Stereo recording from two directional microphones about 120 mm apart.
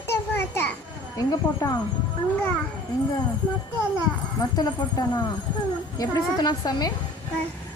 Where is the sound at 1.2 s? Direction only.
35° left (ahead or behind).